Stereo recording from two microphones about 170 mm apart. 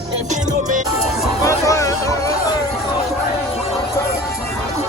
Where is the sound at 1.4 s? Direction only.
20° left (ahead or behind).